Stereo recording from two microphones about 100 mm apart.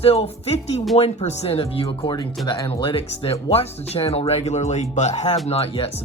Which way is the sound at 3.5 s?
85° left.